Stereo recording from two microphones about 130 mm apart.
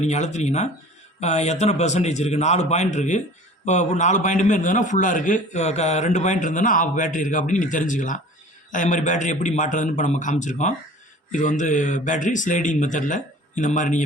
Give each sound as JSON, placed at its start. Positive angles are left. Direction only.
{"t": 0.0, "sound": "a man's voice", "side_deg": 60}